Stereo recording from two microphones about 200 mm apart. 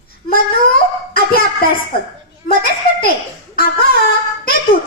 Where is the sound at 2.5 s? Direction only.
50° left (ahead or behind).